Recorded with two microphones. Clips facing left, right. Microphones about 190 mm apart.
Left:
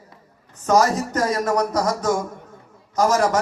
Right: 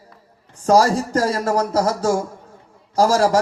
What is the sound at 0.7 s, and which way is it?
Speech, 30° right (ahead or behind).